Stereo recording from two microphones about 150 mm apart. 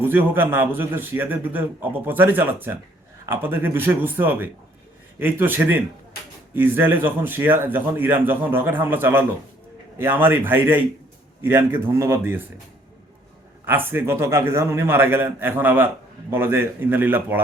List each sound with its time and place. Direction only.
0.0 s a man's voice: 15° right (ahead or behind)
13.7 s a man's voice: 15° right (ahead or behind)